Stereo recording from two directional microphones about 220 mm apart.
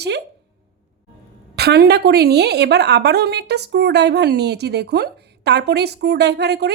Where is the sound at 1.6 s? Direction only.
45° right (ahead or behind).